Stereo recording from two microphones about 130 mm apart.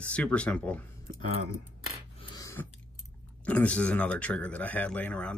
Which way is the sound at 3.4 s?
10° left (ahead or behind).